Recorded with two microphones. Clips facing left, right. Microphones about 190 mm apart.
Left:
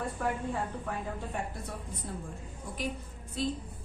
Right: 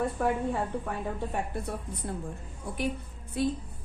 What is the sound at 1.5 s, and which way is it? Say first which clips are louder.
A woman's voice: right 6 dB; 65° right (ahead or behind).